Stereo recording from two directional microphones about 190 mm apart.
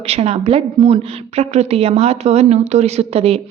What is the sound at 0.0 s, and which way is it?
A woman's voice, 35° right (ahead or behind).